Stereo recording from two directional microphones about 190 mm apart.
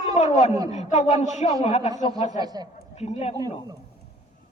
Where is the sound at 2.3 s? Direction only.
20° right (ahead or behind).